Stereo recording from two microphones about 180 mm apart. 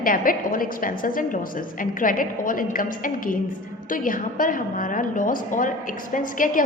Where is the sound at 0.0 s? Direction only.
50° left (ahead or behind).